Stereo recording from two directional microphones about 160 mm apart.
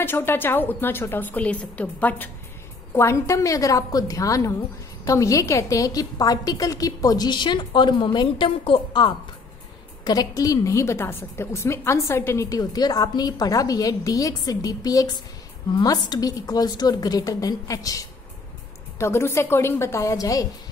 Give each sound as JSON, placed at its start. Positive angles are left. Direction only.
{"t": 0.0, "sound": "a woman's voice", "side_deg": 15}